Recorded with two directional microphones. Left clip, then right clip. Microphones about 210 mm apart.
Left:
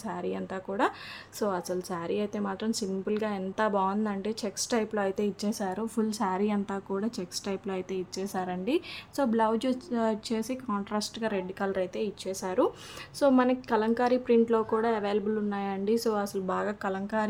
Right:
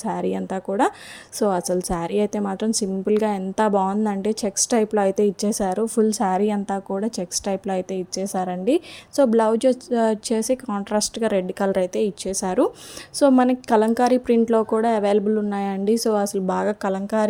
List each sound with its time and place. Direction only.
0.0 s a woman's voice: 30° right (ahead or behind)